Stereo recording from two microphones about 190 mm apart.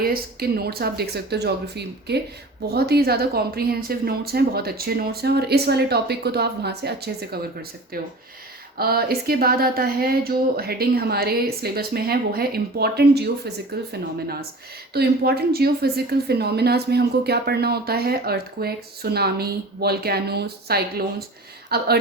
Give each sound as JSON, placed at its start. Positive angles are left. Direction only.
{"t": 0.0, "sound": "speech", "side_deg": -55}
{"t": 8.8, "sound": "speech", "side_deg": -55}
{"t": 14.9, "sound": "speech", "side_deg": -55}